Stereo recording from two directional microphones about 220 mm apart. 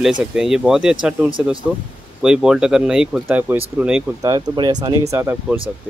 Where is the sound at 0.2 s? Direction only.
5° right (ahead or behind).